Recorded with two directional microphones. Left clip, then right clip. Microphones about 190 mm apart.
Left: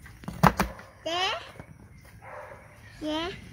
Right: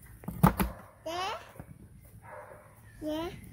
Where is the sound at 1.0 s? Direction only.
40° left (ahead or behind).